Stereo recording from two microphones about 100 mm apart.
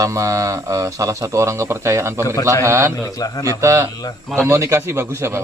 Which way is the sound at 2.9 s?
35° left (ahead or behind).